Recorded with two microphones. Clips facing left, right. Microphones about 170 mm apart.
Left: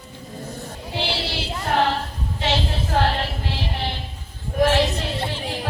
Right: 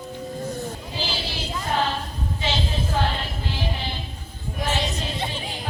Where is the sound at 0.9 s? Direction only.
70° left (ahead or behind).